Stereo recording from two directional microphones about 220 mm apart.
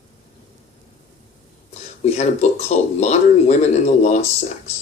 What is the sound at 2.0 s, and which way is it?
Speech, 30° left (ahead or behind).